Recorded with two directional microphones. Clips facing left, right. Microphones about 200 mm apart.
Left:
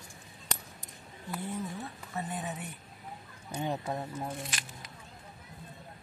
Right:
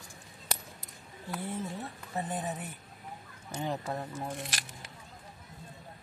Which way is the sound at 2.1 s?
35° right (ahead or behind).